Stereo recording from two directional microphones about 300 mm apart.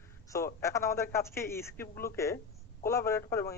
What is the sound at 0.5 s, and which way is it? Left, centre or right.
A man's voice, centre.